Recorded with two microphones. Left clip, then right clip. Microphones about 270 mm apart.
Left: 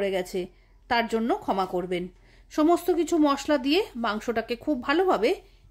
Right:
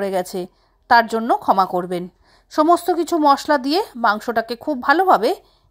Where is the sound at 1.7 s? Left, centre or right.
Right.